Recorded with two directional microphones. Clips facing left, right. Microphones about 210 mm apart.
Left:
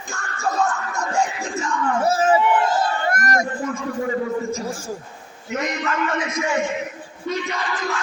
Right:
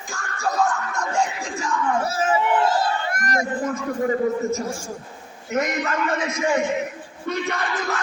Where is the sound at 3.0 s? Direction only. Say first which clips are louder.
Left 3 dB; 45° left (ahead or behind).